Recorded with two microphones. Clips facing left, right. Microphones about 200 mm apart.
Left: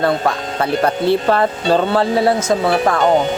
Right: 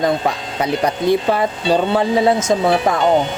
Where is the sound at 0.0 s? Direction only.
15° right (ahead or behind).